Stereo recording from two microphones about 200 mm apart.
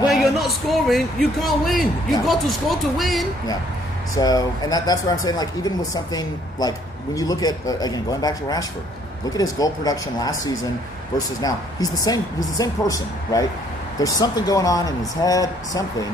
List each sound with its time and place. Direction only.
0.1 s speech: centre (ahead or behind)
4.1 s speech: 20° left (ahead or behind)